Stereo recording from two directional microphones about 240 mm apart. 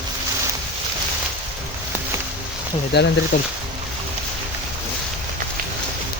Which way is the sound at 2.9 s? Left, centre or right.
Left.